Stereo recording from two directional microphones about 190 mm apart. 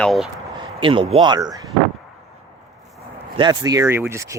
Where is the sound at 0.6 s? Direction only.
25° right (ahead or behind).